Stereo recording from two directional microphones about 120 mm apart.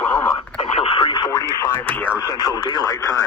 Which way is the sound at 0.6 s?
50° left (ahead or behind).